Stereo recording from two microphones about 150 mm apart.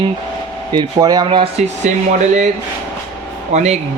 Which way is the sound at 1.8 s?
50° right (ahead or behind).